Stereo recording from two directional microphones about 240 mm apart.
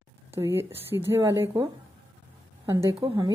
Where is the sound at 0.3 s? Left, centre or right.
Centre.